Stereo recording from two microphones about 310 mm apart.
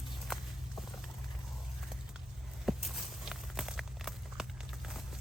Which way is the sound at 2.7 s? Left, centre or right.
Centre.